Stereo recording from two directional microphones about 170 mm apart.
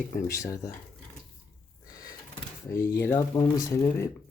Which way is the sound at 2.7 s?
15° left (ahead or behind).